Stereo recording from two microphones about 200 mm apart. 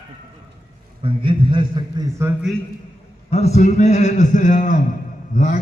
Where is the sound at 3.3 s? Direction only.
30° left (ahead or behind).